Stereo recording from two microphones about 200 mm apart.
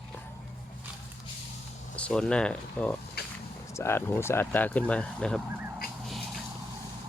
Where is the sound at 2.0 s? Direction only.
5° left (ahead or behind).